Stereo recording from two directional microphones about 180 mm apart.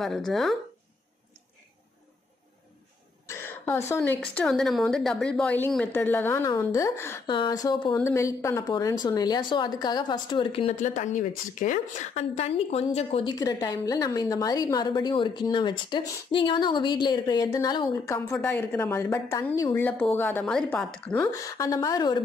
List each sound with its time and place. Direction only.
0.0 s speech: centre (ahead or behind)
3.3 s a woman's voice: 10° left (ahead or behind)
7.2 s a woman's voice: 25° left (ahead or behind)
13.3 s a woman's voice: 20° left (ahead or behind); by 20.9 s 5° left (ahead or behind)
21.1 s a woman's voice: 15° left (ahead or behind)